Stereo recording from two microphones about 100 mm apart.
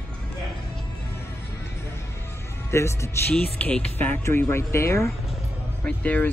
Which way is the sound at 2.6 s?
30° left (ahead or behind).